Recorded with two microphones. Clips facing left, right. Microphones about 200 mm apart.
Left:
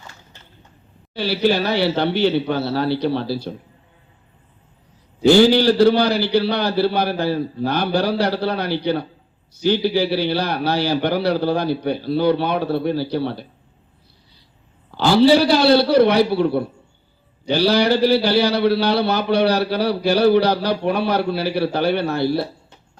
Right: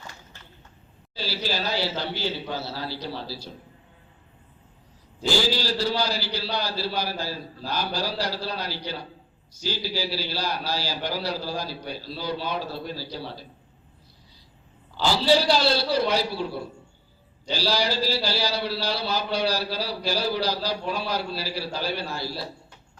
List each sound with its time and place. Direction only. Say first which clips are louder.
1.1 s a man's voice: left 12 dB; 65° left (ahead or behind)
5.2 s a man's voice: left 13 dB; 60° left (ahead or behind)
14.9 s a man's voice: left 8 dB; 60° left (ahead or behind)